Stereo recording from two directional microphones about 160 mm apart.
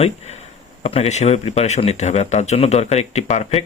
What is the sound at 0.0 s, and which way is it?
Speech, 40° left (ahead or behind).